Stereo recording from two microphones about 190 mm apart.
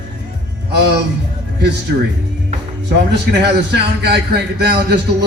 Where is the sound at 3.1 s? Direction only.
60° right (ahead or behind).